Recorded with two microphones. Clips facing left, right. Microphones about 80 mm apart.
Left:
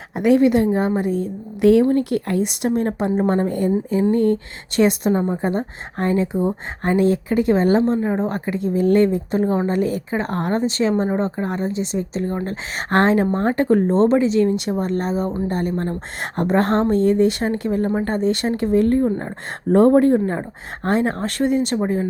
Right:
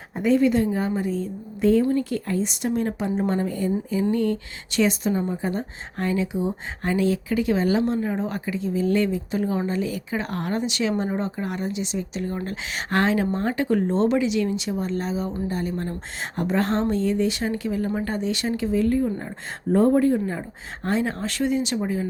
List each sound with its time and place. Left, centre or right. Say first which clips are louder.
0.2 s a woman's voice: left 4 dB; left
7.9 s speech: left 5 dB; left
8.3 s speech: left 5 dB; left
14.5 s speech: left 5 dB; left
19.7 s a woman's voice: left 5 dB; left
20.1 s speech: left 6 dB; left